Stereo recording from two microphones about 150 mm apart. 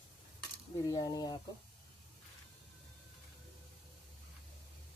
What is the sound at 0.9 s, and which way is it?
Speech, 25° left (ahead or behind).